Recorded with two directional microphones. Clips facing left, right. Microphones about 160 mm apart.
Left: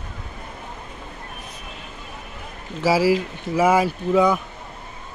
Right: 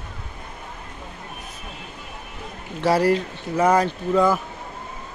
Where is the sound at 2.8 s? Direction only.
5° left (ahead or behind).